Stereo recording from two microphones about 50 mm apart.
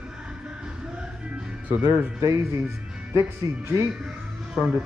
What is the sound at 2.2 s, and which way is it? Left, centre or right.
Speech, right.